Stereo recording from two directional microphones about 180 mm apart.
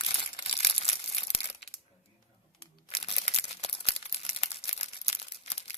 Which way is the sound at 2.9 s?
30° left (ahead or behind).